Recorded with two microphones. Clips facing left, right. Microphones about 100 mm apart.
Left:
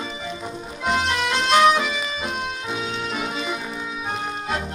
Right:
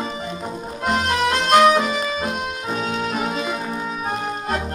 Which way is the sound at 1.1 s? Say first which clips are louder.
Right 5 dB; 45° right (ahead or behind).